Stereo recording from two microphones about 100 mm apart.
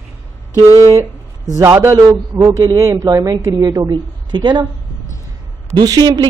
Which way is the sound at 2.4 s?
35° right (ahead or behind).